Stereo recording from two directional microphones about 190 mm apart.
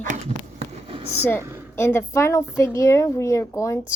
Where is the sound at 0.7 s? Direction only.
30° right (ahead or behind).